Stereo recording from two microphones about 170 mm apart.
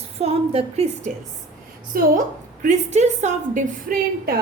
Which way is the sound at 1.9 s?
60° right (ahead or behind).